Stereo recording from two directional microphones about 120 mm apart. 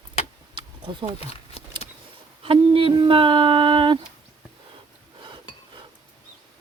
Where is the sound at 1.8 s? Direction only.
55° left (ahead or behind).